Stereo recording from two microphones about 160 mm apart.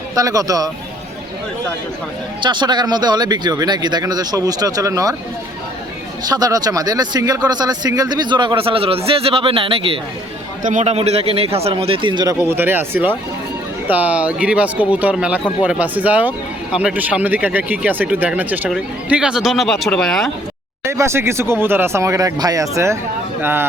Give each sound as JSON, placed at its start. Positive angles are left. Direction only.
{"t": 0.1, "sound": "speech", "side_deg": -20}
{"t": 2.4, "sound": "speech", "side_deg": -30}
{"t": 6.2, "sound": "speech", "side_deg": -25}
{"t": 10.6, "sound": "a man's voice", "side_deg": -50}
{"t": 20.8, "sound": "speech", "side_deg": -15}